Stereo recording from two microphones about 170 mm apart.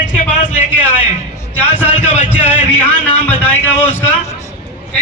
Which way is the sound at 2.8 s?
10° left (ahead or behind).